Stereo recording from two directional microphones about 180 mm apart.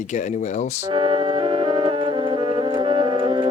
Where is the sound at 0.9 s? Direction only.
30° right (ahead or behind).